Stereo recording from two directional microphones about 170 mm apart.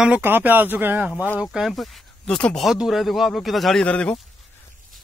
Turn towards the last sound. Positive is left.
turn(degrees=5)  # may be behind; listen again after turning